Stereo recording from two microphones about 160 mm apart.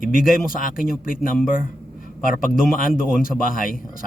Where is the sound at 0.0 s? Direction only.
60° left (ahead or behind).